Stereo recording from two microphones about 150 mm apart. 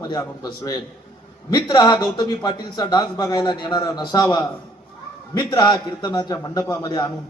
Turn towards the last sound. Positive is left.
turn(degrees=25)  # may be behind; listen again after turning